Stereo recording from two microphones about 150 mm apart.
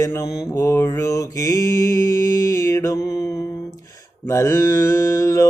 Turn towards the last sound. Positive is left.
turn(degrees=20)  # may be behind; listen again after turning